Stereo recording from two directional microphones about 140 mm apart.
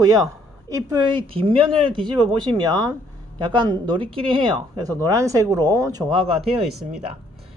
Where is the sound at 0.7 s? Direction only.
25° right (ahead or behind).